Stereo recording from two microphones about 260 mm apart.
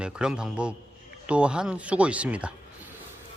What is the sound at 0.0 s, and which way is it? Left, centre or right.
Speech, centre.